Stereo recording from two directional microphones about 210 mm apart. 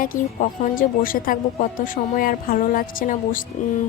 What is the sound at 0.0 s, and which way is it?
Speech, 40° left (ahead or behind).